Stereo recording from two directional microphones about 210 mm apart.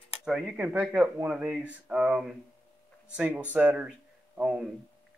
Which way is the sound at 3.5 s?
5° right (ahead or behind).